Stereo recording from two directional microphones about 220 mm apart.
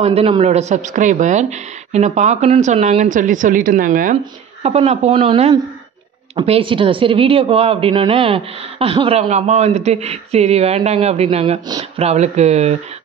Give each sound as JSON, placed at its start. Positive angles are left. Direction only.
{"t": 0.0, "sound": "speech", "side_deg": -25}